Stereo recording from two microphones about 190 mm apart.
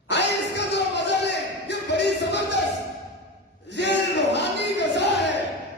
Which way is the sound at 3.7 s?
65° left (ahead or behind).